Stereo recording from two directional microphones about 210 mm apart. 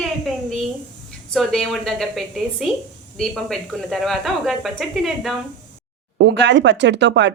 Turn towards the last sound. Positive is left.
turn(degrees=-55)  # may be behind; listen again after turning